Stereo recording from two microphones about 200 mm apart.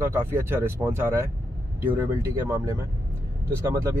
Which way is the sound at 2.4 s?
15° right (ahead or behind).